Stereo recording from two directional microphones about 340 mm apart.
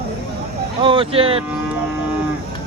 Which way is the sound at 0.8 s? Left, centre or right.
Centre.